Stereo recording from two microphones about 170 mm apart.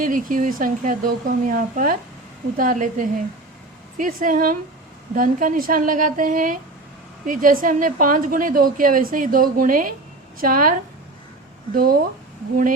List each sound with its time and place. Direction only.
0.0 s a woman's voice: 50° right (ahead or behind)